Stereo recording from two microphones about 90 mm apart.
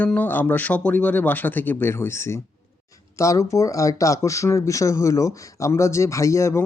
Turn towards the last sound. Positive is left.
turn(degrees=35)  # may be behind; listen again after turning